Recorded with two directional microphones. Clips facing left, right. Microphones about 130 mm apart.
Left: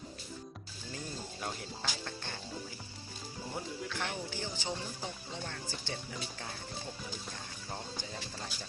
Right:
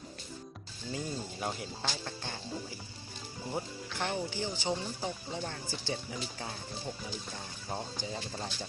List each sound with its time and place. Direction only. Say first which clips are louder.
0.9 s speech: right 5 dB; 10° right (ahead or behind)
3.5 s speech: right 2 dB; 20° right (ahead or behind)
7.7 s speech: right 5 dB; 20° right (ahead or behind)